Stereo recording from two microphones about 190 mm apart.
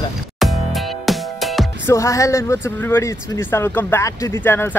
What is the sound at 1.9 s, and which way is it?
Speech, 15° left (ahead or behind).